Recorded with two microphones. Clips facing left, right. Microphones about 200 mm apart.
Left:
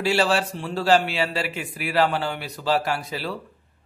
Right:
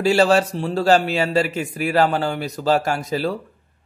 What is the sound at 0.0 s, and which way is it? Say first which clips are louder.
A man's voice: right 6 dB; 45° right (ahead or behind).